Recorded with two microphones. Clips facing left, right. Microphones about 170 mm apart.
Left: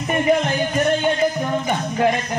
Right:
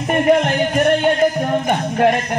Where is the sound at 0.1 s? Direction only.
60° right (ahead or behind).